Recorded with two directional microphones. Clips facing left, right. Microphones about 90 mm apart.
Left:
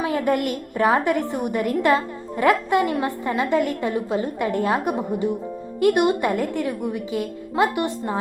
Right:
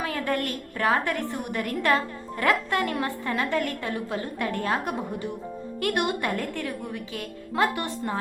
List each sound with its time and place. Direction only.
0.0 s a woman's voice: 20° left (ahead or behind)